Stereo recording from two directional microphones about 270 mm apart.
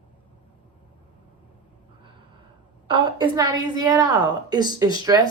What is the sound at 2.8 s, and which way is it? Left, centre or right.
A woman's voice, centre.